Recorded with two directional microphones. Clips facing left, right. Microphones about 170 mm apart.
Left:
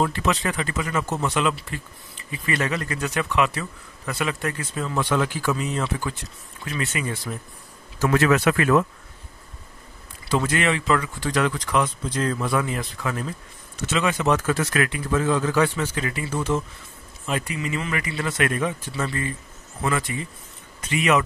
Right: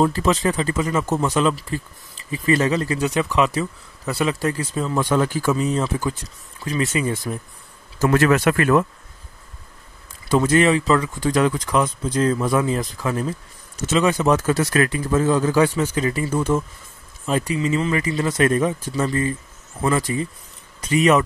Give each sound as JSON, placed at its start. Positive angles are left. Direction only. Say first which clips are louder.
{"t": 0.0, "sound": "speech", "louder": "right 5 dB", "side_deg": -35}
{"t": 1.0, "sound": "speech", "louder": "right 4 dB", "side_deg": -45}
{"t": 8.0, "sound": "speech", "louder": "right 3 dB", "side_deg": -50}
{"t": 10.3, "sound": "speech", "louder": "right 6 dB", "side_deg": -40}
{"t": 17.3, "sound": "speech", "louder": "right 6 dB", "side_deg": -35}